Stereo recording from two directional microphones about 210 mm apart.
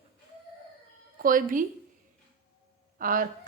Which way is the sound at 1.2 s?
40° right (ahead or behind).